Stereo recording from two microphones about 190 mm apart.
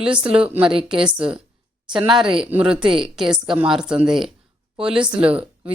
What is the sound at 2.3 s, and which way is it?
A woman's voice, 5° right (ahead or behind).